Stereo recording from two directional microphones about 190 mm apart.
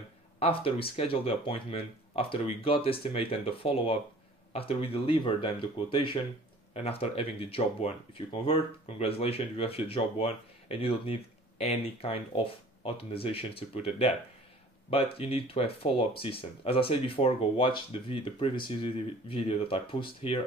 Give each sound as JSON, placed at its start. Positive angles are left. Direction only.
{"t": 0.4, "sound": "speech", "side_deg": 30}